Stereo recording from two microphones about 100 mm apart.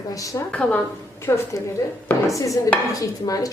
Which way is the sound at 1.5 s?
35° left (ahead or behind).